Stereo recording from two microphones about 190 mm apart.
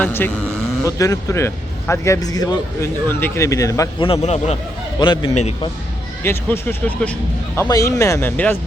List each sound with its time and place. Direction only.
0.0 s speech: 10° left (ahead or behind)
4.1 s a man's voice: 35° left (ahead or behind)
4.9 s a man's voice: 25° left (ahead or behind)
6.2 s speech: 10° left (ahead or behind)